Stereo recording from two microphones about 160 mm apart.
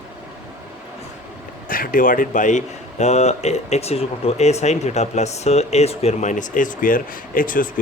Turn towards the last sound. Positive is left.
turn(degrees=60)  # may be behind; listen again after turning